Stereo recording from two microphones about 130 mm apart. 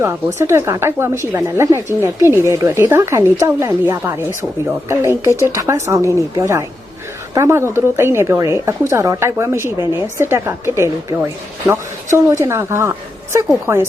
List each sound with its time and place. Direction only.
0.0 s a woman's voice: 20° right (ahead or behind)